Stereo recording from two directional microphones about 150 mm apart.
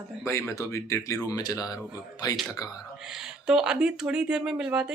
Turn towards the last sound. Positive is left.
turn(degrees=-5)  # may be behind; listen again after turning